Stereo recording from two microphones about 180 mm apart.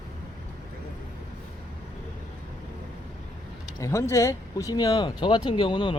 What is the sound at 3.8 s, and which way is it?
Speech, 15° left (ahead or behind).